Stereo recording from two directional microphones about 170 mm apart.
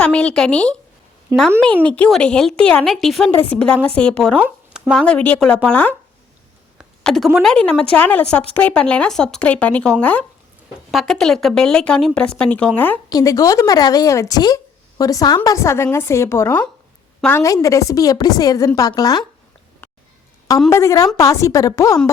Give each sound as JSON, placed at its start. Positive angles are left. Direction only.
{"t": 0.0, "sound": "speech", "side_deg": 5}
{"t": 1.3, "sound": "speech", "side_deg": -20}
{"t": 1.6, "sound": "speech", "side_deg": 5}
{"t": 4.4, "sound": "speech", "side_deg": -5}
{"t": 6.7, "sound": "a sound", "side_deg": 0}
{"t": 7.3, "sound": "speech", "side_deg": 5}
{"t": 13.1, "sound": "a woman's voice", "side_deg": 20}
{"t": 17.4, "sound": "speech", "side_deg": 20}
{"t": 20.7, "sound": "speech", "side_deg": 20}